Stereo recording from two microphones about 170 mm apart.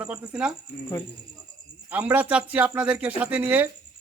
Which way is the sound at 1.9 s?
10° right (ahead or behind).